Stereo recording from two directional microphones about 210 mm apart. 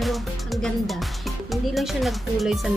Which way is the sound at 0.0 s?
Centre (ahead or behind).